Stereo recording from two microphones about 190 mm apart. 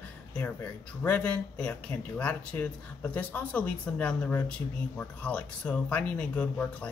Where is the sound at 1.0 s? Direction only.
10° left (ahead or behind).